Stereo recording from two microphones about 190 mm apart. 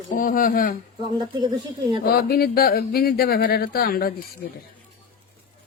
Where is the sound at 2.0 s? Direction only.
50° left (ahead or behind).